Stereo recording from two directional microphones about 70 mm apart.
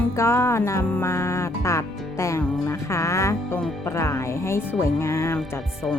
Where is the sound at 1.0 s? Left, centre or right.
Left.